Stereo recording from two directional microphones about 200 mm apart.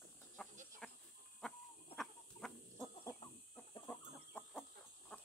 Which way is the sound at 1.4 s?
Centre (ahead or behind).